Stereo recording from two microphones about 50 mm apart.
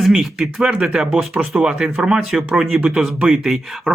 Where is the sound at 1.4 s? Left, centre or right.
Centre.